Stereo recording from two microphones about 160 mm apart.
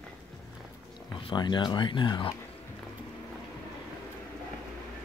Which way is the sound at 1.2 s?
30° left (ahead or behind).